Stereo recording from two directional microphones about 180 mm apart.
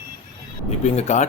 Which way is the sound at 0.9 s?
40° left (ahead or behind).